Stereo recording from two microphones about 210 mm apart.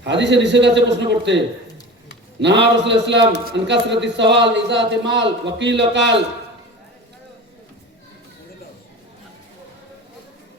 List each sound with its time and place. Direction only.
0.0 s a man's voice: 55° right (ahead or behind)
2.4 s a man's voice: 55° right (ahead or behind)